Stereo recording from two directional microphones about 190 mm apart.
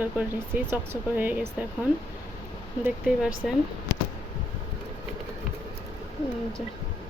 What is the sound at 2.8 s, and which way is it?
Speech, 5° right (ahead or behind).